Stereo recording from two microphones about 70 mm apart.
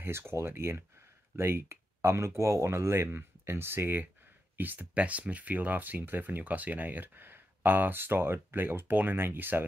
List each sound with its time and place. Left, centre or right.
0.0 s speech: right